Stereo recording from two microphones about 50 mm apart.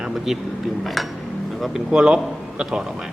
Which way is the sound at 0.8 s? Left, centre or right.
Centre.